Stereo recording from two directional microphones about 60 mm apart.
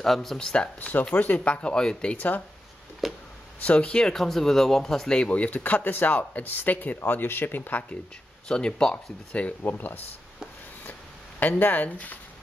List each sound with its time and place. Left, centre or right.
0.0 s speech: centre
0.7 s speech: left
3.0 s a sound: centre
3.6 s speech: centre
8.5 s speech: centre
9.6 s speech: left